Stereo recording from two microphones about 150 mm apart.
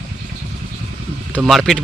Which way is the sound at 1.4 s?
Centre (ahead or behind).